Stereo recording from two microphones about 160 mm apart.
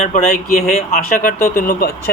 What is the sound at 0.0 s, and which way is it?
Speech, 55° left (ahead or behind).